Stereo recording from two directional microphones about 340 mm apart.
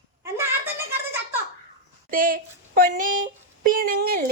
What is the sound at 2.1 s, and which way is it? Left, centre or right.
Speech, right.